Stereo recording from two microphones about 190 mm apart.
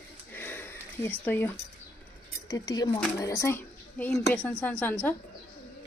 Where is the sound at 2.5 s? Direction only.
20° left (ahead or behind).